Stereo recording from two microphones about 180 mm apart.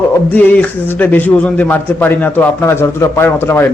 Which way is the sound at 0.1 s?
10° left (ahead or behind).